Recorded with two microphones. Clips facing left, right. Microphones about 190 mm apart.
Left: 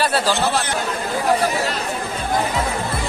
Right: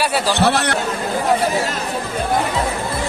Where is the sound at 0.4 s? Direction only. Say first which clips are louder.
Right 4 dB; 70° right (ahead or behind).